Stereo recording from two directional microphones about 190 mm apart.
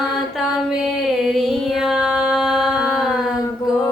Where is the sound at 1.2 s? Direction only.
Centre (ahead or behind).